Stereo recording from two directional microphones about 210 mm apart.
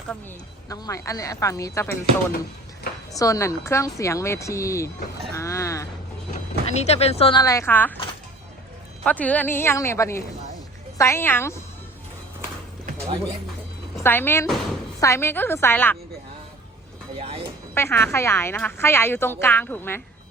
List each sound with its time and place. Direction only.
0.7 s a woman's voice: 15° left (ahead or behind)
3.1 s a woman's voice: 15° left (ahead or behind)
5.4 s a sound: 15° left (ahead or behind)
6.3 s speech: 30° left (ahead or behind); by 7.9 s 10° left (ahead or behind)
9.0 s a woman's voice: 5° left (ahead or behind)
13.9 s a woman's voice: 10° left (ahead or behind)
17.2 s speech: 25° right (ahead or behind)
17.7 s a woman's voice: 10° left (ahead or behind)